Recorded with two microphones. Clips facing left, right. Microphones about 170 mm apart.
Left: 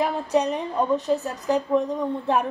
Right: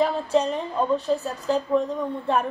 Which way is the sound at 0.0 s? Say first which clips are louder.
Right 1 dB; 15° left (ahead or behind).